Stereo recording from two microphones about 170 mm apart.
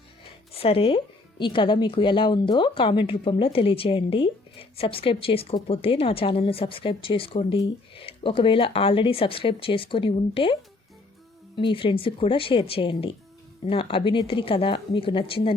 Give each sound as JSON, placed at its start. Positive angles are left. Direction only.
{"t": 0.5, "sound": "speech", "side_deg": 35}